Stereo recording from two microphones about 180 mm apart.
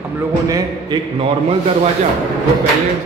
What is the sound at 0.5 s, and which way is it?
Speech, 20° right (ahead or behind).